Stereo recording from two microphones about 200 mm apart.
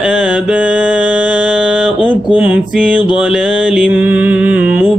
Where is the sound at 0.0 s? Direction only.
5° right (ahead or behind).